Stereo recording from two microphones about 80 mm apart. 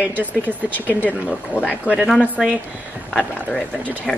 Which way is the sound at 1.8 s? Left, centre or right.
Centre.